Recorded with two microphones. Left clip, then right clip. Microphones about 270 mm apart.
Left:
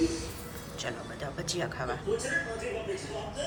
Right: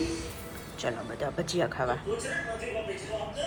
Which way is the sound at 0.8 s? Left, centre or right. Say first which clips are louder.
Right 5 dB; centre.